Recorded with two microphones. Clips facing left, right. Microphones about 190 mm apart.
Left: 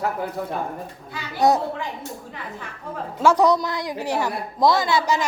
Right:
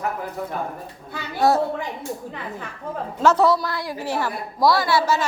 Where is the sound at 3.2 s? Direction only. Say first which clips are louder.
Even; 15° left (ahead or behind).